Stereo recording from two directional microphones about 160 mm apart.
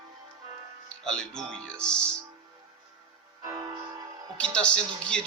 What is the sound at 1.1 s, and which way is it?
Speech, 5° left (ahead or behind).